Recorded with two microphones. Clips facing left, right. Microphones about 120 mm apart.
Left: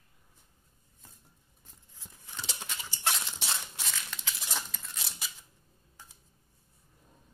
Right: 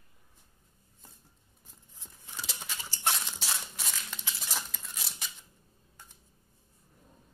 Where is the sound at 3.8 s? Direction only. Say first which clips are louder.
Even; 15° right (ahead or behind).